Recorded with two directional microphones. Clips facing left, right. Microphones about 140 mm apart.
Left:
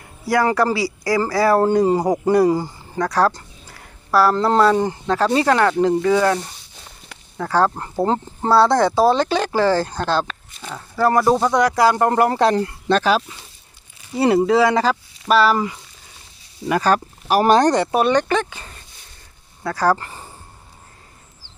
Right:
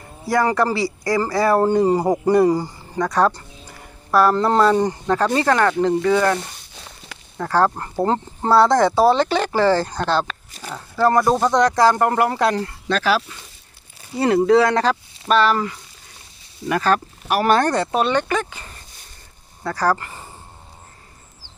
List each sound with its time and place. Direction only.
0.3 s speech: 5° left (ahead or behind)
5.3 s speech: 15° left (ahead or behind)
6.7 s a sound: 90° right
7.4 s speech: 5° left (ahead or behind)
11.9 s speech: 25° left (ahead or behind)
14.2 s speech: 5° left (ahead or behind)
17.2 s speech: 70° right (ahead or behind)
17.7 s speech: 15° left (ahead or behind)
18.1 s speech: 25° left (ahead or behind)
19.6 s speech: 10° left (ahead or behind)